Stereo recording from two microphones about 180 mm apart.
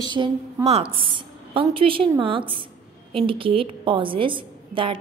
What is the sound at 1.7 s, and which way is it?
A woman's voice, 30° right (ahead or behind).